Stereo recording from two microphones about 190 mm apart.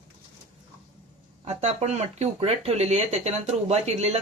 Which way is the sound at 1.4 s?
35° right (ahead or behind).